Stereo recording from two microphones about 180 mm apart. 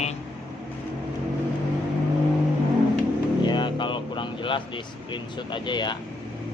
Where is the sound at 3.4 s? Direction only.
25° left (ahead or behind).